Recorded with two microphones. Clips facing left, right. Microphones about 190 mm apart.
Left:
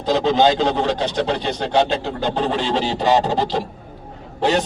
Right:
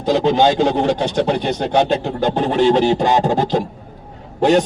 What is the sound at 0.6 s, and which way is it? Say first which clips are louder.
A man's voice: right 3 dB; 50° right (ahead or behind).